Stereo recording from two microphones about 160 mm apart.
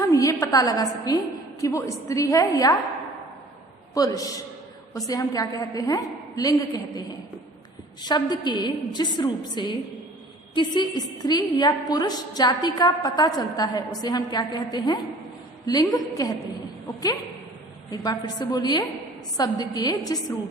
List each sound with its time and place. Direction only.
0.0 s a woman's voice: 20° left (ahead or behind)
3.9 s a woman's voice: 20° left (ahead or behind)
17.9 s a woman's voice: 25° left (ahead or behind)